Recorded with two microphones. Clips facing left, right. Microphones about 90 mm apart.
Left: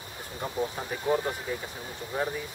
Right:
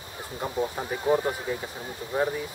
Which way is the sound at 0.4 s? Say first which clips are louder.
Right 2 dB; 15° right (ahead or behind).